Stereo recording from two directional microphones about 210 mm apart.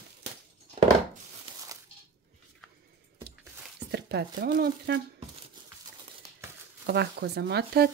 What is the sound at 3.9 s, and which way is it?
Speech, 50° right (ahead or behind).